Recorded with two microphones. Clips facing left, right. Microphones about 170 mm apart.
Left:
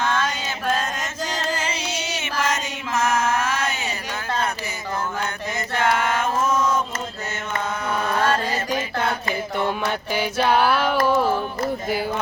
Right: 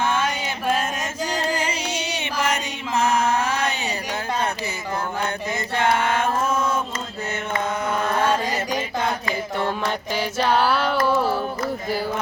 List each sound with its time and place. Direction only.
0.0 s music: 10° right (ahead or behind)
3.0 s mantra: 15° right (ahead or behind)
3.2 s a sound: 35° right (ahead or behind)
6.4 s chant: 30° right (ahead or behind)
8.2 s music: 10° right (ahead or behind)
9.2 s music: 20° left (ahead or behind)